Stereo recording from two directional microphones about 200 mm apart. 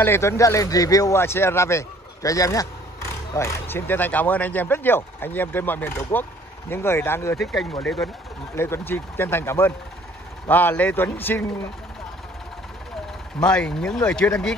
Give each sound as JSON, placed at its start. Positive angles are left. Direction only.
{"t": 0.0, "sound": "speech", "side_deg": 10}
{"t": 7.6, "sound": "speech", "side_deg": 0}
{"t": 8.5, "sound": "speech", "side_deg": 15}
{"t": 13.4, "sound": "speech", "side_deg": 5}